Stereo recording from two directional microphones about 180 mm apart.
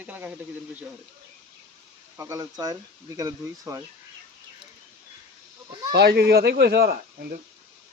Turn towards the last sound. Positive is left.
turn(degrees=-55)  # may be behind; listen again after turning